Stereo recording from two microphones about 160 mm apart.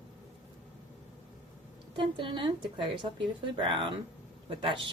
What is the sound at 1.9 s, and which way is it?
Speech, 30° right (ahead or behind).